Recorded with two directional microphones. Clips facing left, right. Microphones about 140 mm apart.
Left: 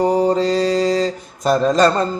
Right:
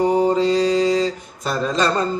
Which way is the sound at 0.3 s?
40° left (ahead or behind).